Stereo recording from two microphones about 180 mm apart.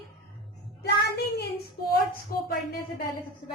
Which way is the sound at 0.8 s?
65° left (ahead or behind).